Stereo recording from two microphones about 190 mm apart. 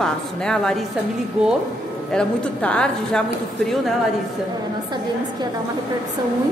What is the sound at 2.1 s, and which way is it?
A woman's voice, 5° left (ahead or behind).